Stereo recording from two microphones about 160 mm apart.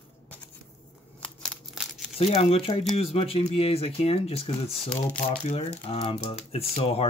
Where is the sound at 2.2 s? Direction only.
40° left (ahead or behind).